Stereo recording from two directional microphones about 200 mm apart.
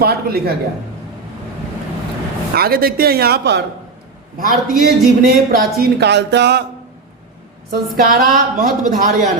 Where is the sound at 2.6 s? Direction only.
50° right (ahead or behind).